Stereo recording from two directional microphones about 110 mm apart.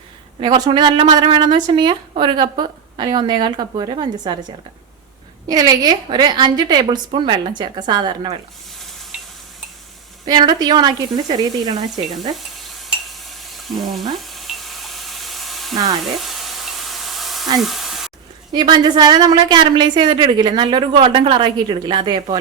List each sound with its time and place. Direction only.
0.3 s a woman's voice: 40° right (ahead or behind)
5.5 s a woman's voice: 35° right (ahead or behind)
9.1 s a sound: 15° right (ahead or behind)
10.2 s a woman's voice: 40° right (ahead or behind)
12.5 s stir: centre (ahead or behind)
16.2 s sizzle: centre (ahead or behind)
17.6 s a sound: centre (ahead or behind)
18.5 s a woman's voice: 40° right (ahead or behind)